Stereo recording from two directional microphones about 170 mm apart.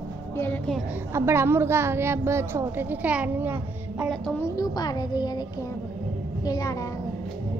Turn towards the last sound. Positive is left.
turn(degrees=20)  # may be behind; listen again after turning